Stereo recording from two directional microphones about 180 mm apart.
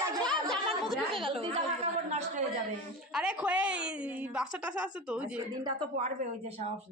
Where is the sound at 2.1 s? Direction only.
40° right (ahead or behind).